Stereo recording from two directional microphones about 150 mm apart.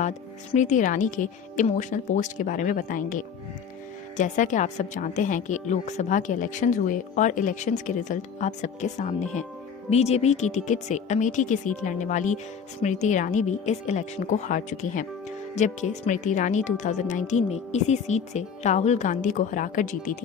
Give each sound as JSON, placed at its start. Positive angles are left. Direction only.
{"t": 0.0, "sound": "a woman's voice", "side_deg": 50}